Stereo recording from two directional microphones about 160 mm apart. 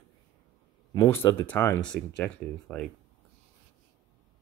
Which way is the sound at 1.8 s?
5° left (ahead or behind).